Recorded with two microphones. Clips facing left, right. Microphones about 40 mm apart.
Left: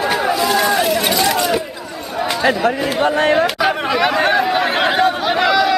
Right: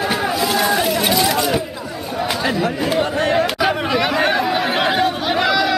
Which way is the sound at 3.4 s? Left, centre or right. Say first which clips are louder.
Left 2 dB; centre.